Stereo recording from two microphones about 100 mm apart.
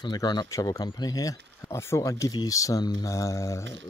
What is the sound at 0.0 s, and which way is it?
Speech, 45° left (ahead or behind).